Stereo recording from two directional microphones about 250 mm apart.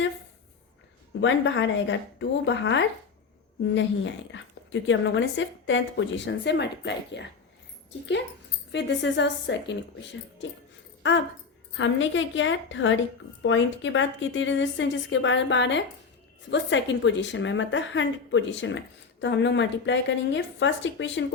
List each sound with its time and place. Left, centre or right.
1.2 s a woman's voice: left
8.7 s a woman's voice: left